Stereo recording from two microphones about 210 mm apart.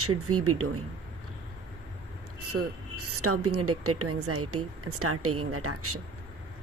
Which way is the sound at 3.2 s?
90° right.